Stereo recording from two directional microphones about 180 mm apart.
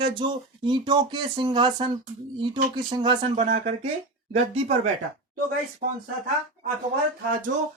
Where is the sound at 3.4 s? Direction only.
45° right (ahead or behind).